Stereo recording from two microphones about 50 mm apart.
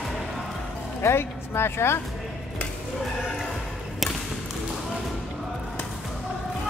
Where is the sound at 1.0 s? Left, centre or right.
Left.